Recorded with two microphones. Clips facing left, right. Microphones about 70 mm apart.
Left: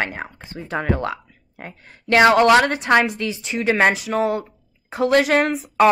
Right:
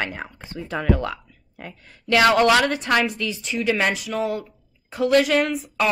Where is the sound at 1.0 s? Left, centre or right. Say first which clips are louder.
Left 3 dB; left.